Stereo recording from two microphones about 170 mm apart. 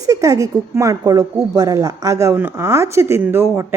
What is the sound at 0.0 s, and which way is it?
A woman's voice, 20° right (ahead or behind).